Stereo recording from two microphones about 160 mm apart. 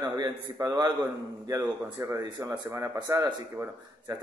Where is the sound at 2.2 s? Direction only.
30° right (ahead or behind).